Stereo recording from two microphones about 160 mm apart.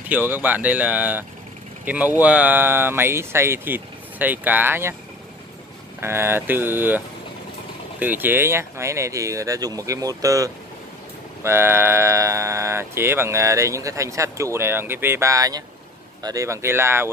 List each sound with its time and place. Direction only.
0.1 s speech: 10° right (ahead or behind)
2.2 s speech: 10° right (ahead or behind)
5.9 s speech: 15° right (ahead or behind)
8.0 s speech: 10° right (ahead or behind)